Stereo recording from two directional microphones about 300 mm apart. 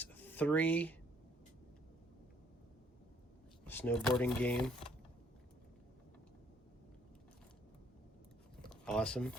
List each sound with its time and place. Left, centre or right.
0.0 s speech: centre
3.7 s speech: centre
8.7 s speech: centre